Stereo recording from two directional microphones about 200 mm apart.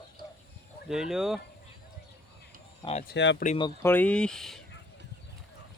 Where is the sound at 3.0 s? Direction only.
60° left (ahead or behind).